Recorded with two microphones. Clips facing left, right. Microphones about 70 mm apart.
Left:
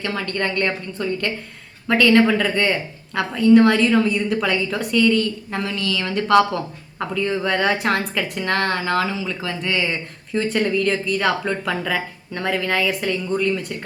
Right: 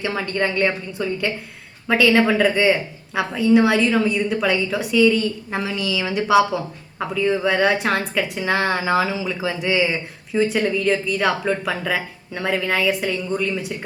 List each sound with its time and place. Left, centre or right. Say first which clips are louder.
0.0 s a woman's voice: right 2 dB; centre